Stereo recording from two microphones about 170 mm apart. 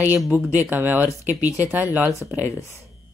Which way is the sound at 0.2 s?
10° right (ahead or behind).